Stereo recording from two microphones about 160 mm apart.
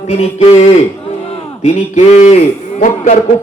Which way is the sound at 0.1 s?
45° left (ahead or behind).